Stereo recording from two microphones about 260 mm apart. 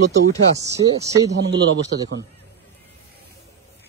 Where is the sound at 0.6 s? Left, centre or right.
Centre.